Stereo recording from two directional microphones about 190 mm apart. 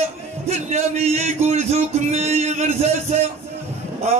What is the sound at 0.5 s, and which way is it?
A man's voice, 35° right (ahead or behind).